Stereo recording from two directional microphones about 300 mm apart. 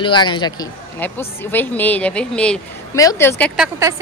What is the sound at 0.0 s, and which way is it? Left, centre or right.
A woman's voice, centre.